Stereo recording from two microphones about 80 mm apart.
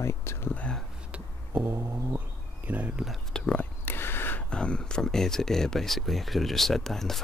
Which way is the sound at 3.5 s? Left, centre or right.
Left.